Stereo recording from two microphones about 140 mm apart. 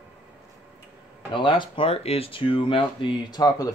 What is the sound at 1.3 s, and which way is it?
Speech, 35° left (ahead or behind).